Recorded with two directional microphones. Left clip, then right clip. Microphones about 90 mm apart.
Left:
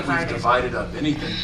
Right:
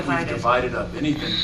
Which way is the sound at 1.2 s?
20° right (ahead or behind).